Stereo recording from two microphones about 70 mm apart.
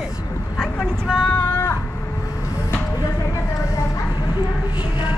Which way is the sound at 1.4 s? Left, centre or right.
Left.